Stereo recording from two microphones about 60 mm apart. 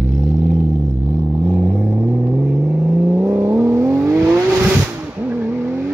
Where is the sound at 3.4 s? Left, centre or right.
Right.